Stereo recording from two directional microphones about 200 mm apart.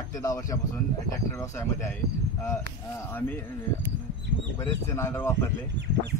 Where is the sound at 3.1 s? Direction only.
10° left (ahead or behind).